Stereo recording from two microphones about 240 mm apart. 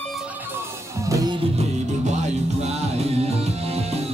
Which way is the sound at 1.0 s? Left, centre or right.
Centre.